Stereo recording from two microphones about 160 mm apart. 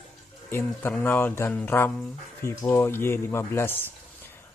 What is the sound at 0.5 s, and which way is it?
Speech, 15° left (ahead or behind).